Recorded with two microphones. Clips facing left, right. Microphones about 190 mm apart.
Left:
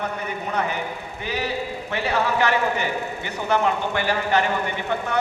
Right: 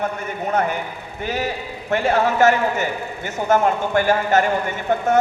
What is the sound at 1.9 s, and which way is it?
A man's voice, 50° right (ahead or behind).